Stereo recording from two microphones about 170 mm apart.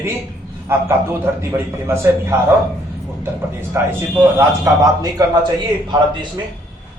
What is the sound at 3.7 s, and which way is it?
A man's voice, 15° right (ahead or behind).